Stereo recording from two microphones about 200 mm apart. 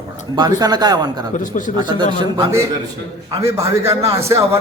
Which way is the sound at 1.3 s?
40° left (ahead or behind).